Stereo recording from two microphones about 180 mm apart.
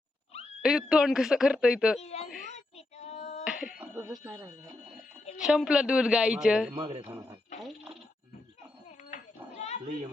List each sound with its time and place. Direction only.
0.6 s speech: 5° right (ahead or behind)
2.0 s speech: 35° left (ahead or behind)
2.7 s female singing: 35° left (ahead or behind)
3.4 s a sound: 5° right (ahead or behind)
4.2 s speech: 20° right (ahead or behind)
5.4 s speech: 5° right (ahead or behind)
7.1 s speech: 20° right (ahead or behind)
7.6 s speech: centre (ahead or behind)
9.0 s cat: 40° left (ahead or behind)